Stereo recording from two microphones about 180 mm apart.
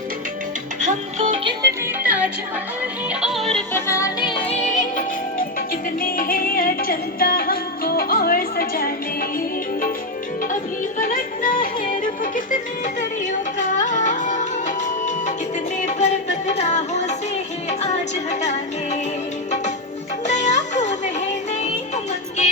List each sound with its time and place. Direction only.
0.8 s music: 45° right (ahead or behind)
2.0 s music: 10° right (ahead or behind)
3.7 s music: 15° left (ahead or behind); by 8.9 s 55° left (ahead or behind)
10.5 s music: 45° left (ahead or behind)
13.6 s music: 45° left (ahead or behind)
15.8 s music: 40° left (ahead or behind)
20.2 s music: 40° left (ahead or behind)